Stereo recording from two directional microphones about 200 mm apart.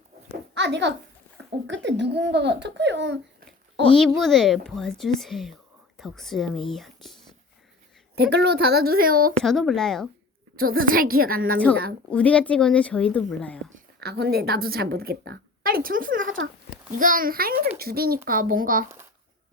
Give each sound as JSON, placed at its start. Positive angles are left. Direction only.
{"t": 0.5, "sound": "a child's voice", "side_deg": -60}
{"t": 3.9, "sound": "speech", "side_deg": 0}
{"t": 8.1, "sound": "a woman's voice", "side_deg": -55}
{"t": 9.4, "sound": "speech", "side_deg": 0}
{"t": 10.6, "sound": "a woman's voice", "side_deg": -45}
{"t": 12.1, "sound": "speech", "side_deg": 5}
{"t": 13.7, "sound": "a woman's voice", "side_deg": -50}